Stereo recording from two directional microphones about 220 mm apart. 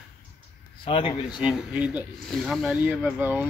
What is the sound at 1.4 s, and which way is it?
Speech, 5° right (ahead or behind).